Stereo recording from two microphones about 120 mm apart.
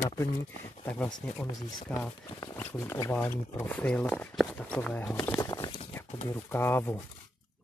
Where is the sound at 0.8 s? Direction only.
10° left (ahead or behind).